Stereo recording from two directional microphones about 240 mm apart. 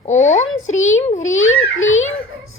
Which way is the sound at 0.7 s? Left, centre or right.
Left.